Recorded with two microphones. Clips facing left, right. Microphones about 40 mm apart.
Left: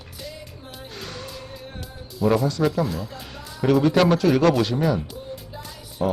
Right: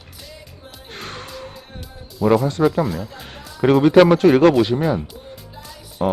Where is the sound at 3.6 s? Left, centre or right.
Right.